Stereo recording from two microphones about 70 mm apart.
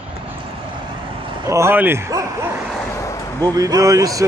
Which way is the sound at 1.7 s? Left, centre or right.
Right.